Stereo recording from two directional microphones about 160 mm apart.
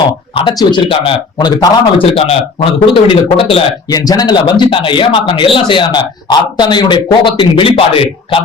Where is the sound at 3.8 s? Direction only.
25° left (ahead or behind).